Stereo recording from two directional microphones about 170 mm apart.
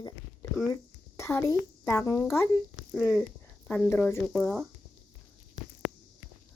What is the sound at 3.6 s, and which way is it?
Speech, 10° left (ahead or behind).